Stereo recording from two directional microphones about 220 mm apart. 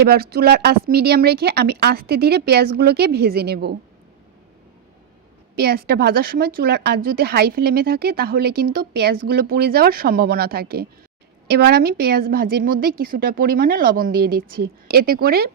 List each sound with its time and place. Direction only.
0.0 s speech: 45° right (ahead or behind)
5.5 s speech: 45° right (ahead or behind)